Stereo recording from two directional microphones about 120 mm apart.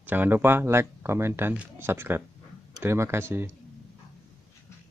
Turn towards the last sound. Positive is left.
turn(degrees=-20)  # may be behind; listen again after turning